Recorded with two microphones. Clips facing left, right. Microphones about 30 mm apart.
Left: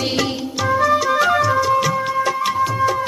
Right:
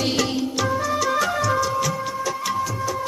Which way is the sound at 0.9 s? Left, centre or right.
Centre.